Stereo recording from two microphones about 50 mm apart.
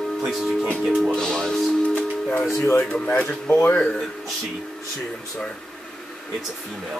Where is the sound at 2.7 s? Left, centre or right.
Left.